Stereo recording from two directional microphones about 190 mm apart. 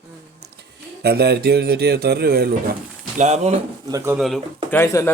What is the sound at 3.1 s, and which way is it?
Speech, 35° right (ahead or behind).